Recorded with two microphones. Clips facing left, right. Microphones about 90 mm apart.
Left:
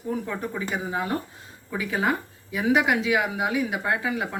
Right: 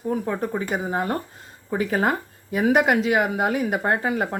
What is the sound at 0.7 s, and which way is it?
Speech, 45° right (ahead or behind).